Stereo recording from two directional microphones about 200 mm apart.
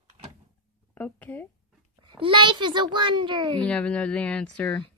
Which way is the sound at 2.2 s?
25° right (ahead or behind).